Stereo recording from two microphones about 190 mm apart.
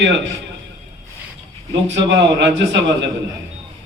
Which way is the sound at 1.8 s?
70° right (ahead or behind).